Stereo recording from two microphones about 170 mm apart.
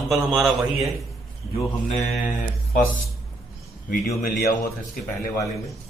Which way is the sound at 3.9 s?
60° left (ahead or behind).